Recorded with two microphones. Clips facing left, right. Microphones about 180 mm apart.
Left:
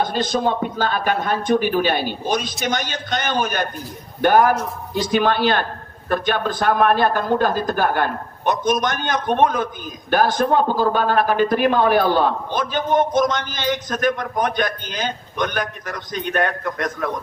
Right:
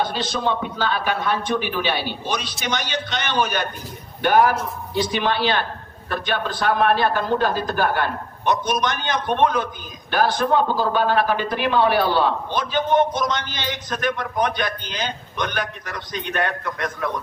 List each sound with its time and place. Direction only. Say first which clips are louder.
0.0 s a man's voice: left 3 dB; 45° left (ahead or behind)